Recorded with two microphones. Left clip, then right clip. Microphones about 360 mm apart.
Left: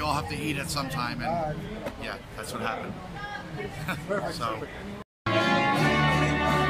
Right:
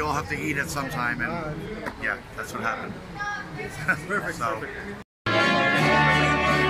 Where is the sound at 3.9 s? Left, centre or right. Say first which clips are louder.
Right 5 dB; centre.